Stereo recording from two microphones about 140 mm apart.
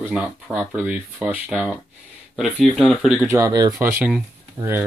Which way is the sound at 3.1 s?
20° right (ahead or behind).